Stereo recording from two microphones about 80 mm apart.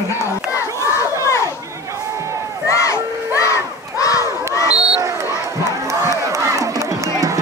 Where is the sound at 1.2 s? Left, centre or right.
Left.